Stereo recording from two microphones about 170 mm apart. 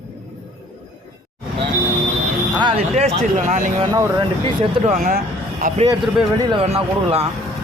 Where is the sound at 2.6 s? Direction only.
30° right (ahead or behind).